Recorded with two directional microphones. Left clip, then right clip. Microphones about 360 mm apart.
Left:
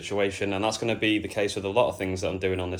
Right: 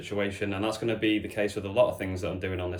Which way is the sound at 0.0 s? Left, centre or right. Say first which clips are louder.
Left 4 dB; centre.